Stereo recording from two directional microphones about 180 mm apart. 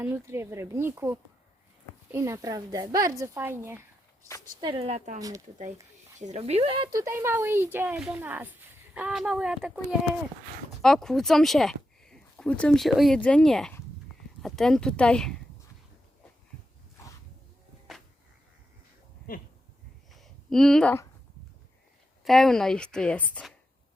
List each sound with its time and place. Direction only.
0.0 s speech: 15° right (ahead or behind)
4.6 s speech: 30° right (ahead or behind)
6.9 s a woman's voice: 15° right (ahead or behind)
10.8 s a woman's voice: centre (ahead or behind)
19.3 s a sound: 50° left (ahead or behind)
20.2 s speech: centre (ahead or behind)
22.2 s a woman's voice: centre (ahead or behind)